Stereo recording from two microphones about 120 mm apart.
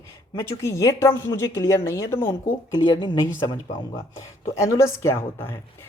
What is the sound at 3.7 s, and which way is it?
Speech, 30° left (ahead or behind).